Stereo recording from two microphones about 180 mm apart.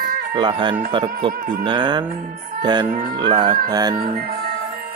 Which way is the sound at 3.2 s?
25° right (ahead or behind).